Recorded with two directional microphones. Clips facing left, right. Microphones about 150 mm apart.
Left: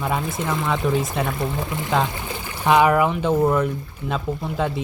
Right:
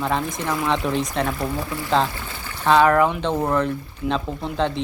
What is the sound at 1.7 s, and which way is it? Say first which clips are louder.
Speech: right 2 dB; 20° left (ahead or behind).